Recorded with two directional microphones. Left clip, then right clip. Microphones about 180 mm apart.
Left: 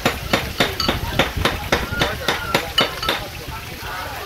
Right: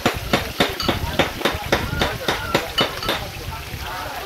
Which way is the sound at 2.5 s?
25° right (ahead or behind).